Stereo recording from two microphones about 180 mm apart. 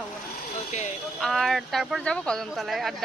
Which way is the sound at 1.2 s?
Centre (ahead or behind).